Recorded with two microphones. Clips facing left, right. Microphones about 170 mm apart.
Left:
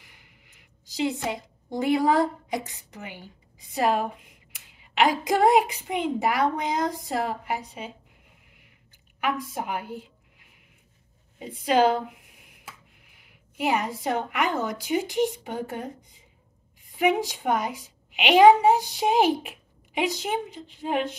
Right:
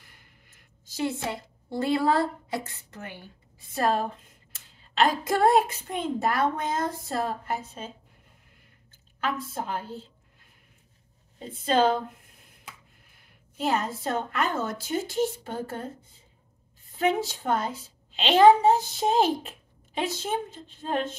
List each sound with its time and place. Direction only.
0.0 s a woman's voice: 15° left (ahead or behind)
9.2 s a woman's voice: 15° left (ahead or behind)
11.3 s a sound: 10° left (ahead or behind)
13.6 s a woman's voice: 15° left (ahead or behind)